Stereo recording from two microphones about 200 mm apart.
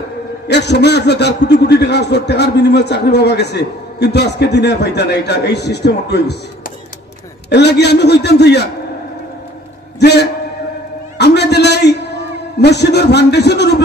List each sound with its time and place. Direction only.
0.5 s a man's voice: 60° left (ahead or behind)
7.4 s a man's voice: 55° left (ahead or behind)
9.9 s a man's voice: 55° left (ahead or behind)